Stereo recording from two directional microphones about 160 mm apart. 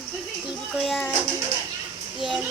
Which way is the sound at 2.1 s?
Centre (ahead or behind).